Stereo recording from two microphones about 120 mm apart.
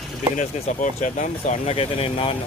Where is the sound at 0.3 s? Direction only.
90° left.